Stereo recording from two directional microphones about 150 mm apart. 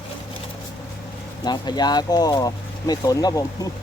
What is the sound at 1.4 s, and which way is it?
Speech, 30° left (ahead or behind).